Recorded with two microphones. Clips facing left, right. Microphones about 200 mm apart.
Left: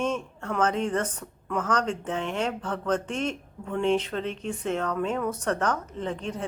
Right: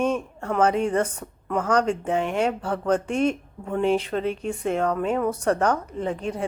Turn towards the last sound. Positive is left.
turn(degrees=-10)  # may be behind; listen again after turning